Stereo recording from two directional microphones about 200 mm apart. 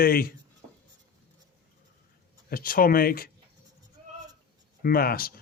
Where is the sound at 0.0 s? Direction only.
50° left (ahead or behind).